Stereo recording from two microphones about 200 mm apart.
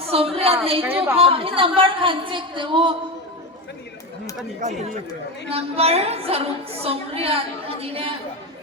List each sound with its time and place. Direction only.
0.0 s a sound: 30° right (ahead or behind)
0.3 s a woman's voice: 30° right (ahead or behind)
0.9 s a woman's voice: 10° right (ahead or behind)
1.1 s a woman's voice: 30° right (ahead or behind)
5.5 s a woman's voice: 30° right (ahead or behind)